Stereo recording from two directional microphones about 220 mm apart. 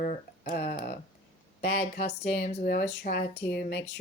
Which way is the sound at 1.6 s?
30° left (ahead or behind).